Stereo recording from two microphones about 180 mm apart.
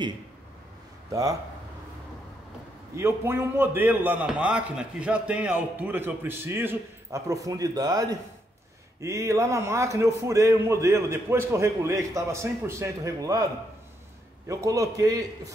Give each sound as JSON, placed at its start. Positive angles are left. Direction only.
{"t": 3.0, "sound": "a man's voice", "side_deg": -15}
{"t": 14.5, "sound": "a man's voice", "side_deg": -20}